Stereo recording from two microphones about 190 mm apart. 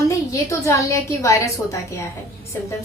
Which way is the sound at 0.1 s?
15° left (ahead or behind).